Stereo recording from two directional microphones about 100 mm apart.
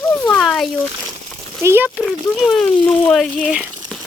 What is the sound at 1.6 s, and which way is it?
Speech, 25° right (ahead or behind).